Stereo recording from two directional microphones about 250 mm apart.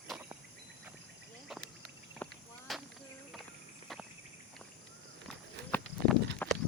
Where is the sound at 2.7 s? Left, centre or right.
Centre.